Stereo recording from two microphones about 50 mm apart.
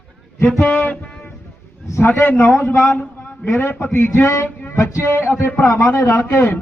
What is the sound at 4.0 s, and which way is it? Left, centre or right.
Speech, left.